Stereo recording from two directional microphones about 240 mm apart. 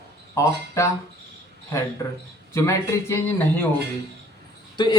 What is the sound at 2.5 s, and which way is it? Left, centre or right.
Speech, centre.